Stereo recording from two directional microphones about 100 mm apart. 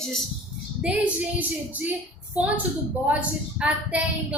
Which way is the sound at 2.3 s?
15° right (ahead or behind).